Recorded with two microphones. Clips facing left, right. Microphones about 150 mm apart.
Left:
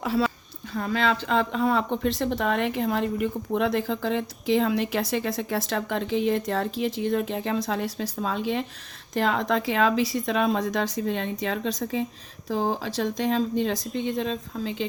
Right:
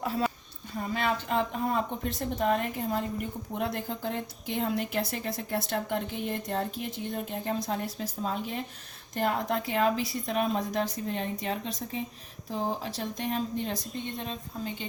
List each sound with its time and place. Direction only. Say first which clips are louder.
0.0 s speech: left 5 dB; 90° left